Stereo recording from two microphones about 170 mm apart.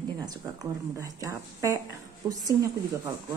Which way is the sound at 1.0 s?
20° right (ahead or behind).